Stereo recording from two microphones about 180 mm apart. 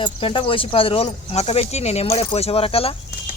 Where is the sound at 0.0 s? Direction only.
30° left (ahead or behind).